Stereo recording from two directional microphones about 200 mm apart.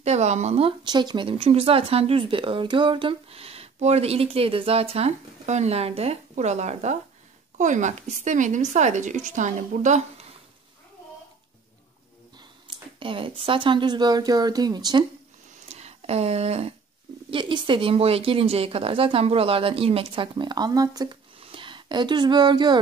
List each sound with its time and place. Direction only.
0.0 s speech: 35° right (ahead or behind)
12.6 s a sound: 25° right (ahead or behind)
13.5 s speech: 25° right (ahead or behind)
15.7 s speech: 30° right (ahead or behind)